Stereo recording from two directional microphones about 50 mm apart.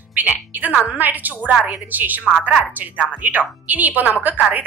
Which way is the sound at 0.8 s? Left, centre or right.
Right.